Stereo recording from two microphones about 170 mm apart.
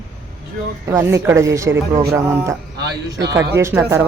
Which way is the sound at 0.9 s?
15° right (ahead or behind).